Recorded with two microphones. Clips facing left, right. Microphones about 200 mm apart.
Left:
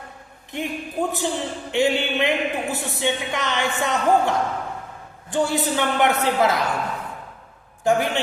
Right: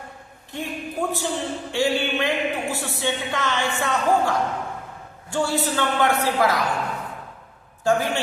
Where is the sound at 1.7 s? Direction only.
20° left (ahead or behind).